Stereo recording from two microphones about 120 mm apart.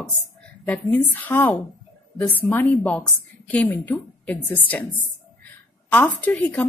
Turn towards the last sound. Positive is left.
turn(degrees=10)  # may be behind; listen again after turning